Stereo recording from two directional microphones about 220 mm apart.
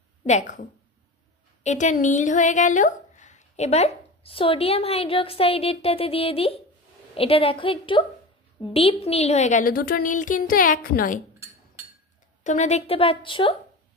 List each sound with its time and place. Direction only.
0.3 s a woman's voice: 35° left (ahead or behind)
12.4 s a woman's voice: 30° left (ahead or behind)